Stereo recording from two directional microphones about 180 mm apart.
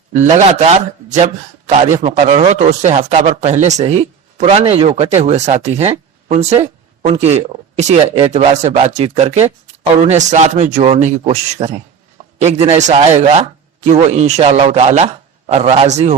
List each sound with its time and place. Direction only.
0.1 s speech: 40° right (ahead or behind)